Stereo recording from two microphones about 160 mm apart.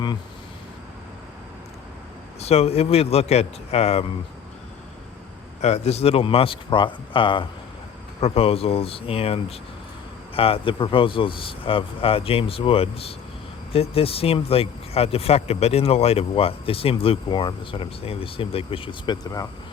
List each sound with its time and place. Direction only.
2.4 s speech: 40° left (ahead or behind)
5.6 s speech: 40° left (ahead or behind); by 19.5 s 25° left (ahead or behind)